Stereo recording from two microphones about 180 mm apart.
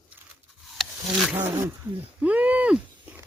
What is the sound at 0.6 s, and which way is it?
Wild animals, centre (ahead or behind).